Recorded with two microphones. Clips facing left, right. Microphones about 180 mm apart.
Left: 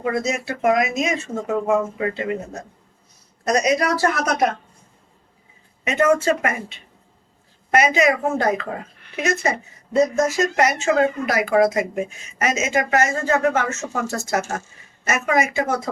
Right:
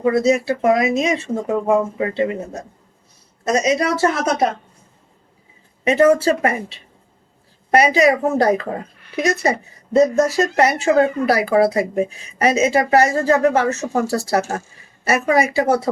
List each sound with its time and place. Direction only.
0.0 s a woman's voice: 30° right (ahead or behind)
5.8 s a woman's voice: 30° right (ahead or behind)